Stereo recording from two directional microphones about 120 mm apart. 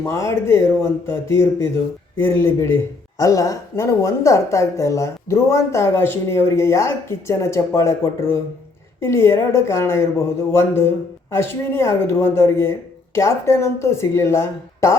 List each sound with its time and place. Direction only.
0.0 s speech: 25° left (ahead or behind)